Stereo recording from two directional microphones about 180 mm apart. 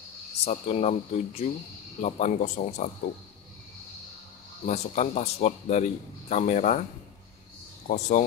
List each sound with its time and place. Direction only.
0.4 s speech: 35° left (ahead or behind)
4.6 s speech: 40° left (ahead or behind)